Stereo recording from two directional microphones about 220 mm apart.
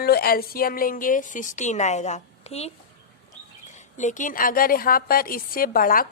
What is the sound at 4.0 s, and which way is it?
A woman's voice, 35° left (ahead or behind).